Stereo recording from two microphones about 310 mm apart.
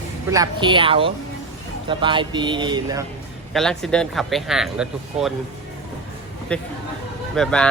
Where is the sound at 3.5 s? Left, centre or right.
Centre.